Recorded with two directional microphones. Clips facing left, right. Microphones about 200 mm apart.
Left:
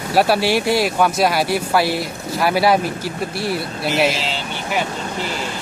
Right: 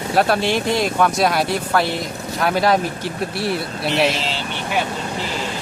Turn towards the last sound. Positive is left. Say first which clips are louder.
# left 1 dB
turn(degrees=0)  # may be behind; listen again after turning